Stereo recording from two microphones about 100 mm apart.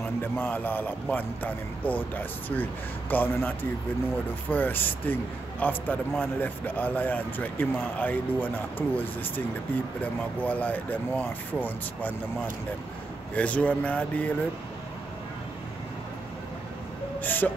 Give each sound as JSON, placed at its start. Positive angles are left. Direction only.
{"t": 0.2, "sound": "a man's voice", "side_deg": 15}
{"t": 10.4, "sound": "speech", "side_deg": 15}
{"t": 13.3, "sound": "speech", "side_deg": 15}
{"t": 17.2, "sound": "vehicle", "side_deg": 20}